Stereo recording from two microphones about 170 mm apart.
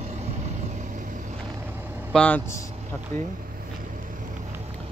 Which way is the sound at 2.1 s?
10° left (ahead or behind).